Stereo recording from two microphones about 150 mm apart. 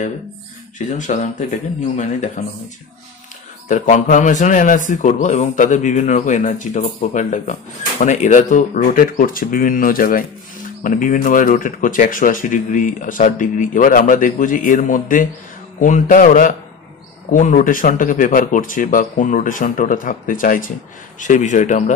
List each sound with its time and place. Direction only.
0.7 s speech: 55° left (ahead or behind)
3.6 s speech: 55° left (ahead or behind)